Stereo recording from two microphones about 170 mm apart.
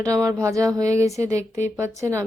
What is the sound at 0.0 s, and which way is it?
A woman's voice, 20° right (ahead or behind).